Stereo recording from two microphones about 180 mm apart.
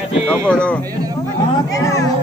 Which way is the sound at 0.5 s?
5° left (ahead or behind).